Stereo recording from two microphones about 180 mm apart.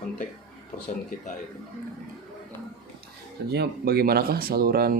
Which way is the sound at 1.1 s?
50° left (ahead or behind).